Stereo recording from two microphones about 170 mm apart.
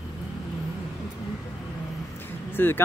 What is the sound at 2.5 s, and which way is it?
Speech, 15° left (ahead or behind).